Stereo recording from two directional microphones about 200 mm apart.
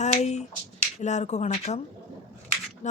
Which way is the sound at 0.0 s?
35° left (ahead or behind).